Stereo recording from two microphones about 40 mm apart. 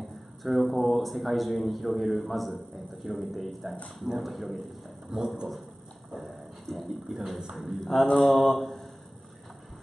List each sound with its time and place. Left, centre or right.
0.4 s speech: centre
5.1 s speech: centre
6.7 s speech: centre
7.2 s speech: centre